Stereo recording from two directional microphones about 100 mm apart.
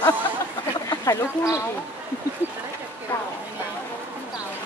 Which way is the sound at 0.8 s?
35° left (ahead or behind).